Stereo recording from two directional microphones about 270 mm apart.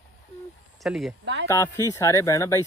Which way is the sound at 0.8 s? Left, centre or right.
Centre.